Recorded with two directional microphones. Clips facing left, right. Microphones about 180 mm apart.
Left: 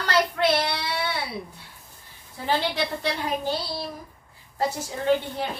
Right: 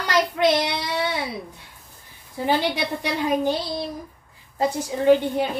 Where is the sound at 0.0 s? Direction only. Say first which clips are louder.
Right 3 dB; 15° right (ahead or behind).